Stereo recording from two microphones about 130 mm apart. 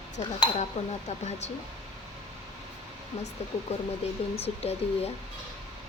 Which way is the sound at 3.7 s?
55° left (ahead or behind).